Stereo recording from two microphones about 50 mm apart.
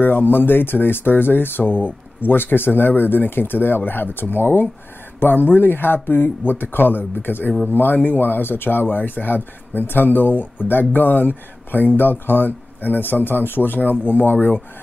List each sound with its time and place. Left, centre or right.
0.0 s speech: left